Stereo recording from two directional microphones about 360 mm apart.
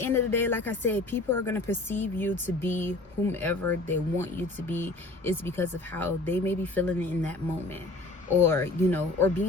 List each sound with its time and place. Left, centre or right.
0.0 s speech: centre
8.4 s speech: centre